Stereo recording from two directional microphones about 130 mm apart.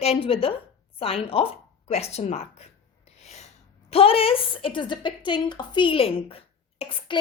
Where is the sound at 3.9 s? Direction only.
45° left (ahead or behind).